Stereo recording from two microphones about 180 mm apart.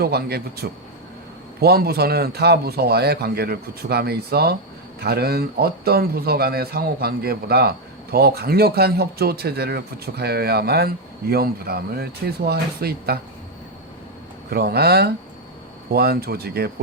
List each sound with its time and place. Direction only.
0.0 s speech: 60° right (ahead or behind)
14.5 s speech: 60° right (ahead or behind)